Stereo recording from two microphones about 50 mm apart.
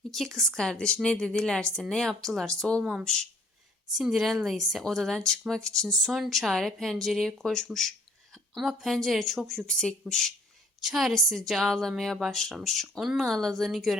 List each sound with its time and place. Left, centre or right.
0.1 s a woman's voice: centre
3.9 s a woman's voice: centre
7.2 s a woman's voice: centre
9.6 s a woman's voice: centre
10.8 s a woman's voice: centre
13.0 s speech: centre
13.2 s a woman's voice: centre